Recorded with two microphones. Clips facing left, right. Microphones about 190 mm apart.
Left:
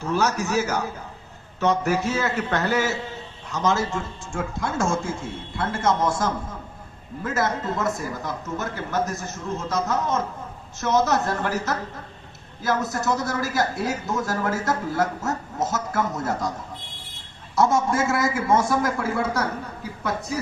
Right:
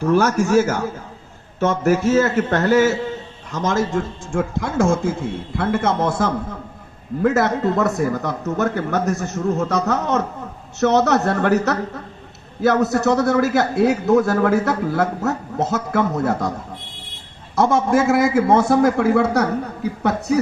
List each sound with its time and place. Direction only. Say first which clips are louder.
0.0 s a man's voice: right 7 dB; 55° right (ahead or behind)